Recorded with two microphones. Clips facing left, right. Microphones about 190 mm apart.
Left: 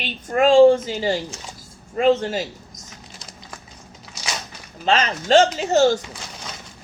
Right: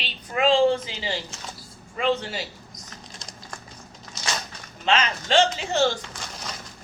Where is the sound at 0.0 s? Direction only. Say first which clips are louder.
Left 5 dB; 45° left (ahead or behind).